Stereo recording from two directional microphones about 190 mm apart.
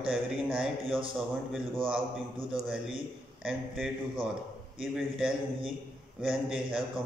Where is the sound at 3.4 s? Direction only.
Centre (ahead or behind).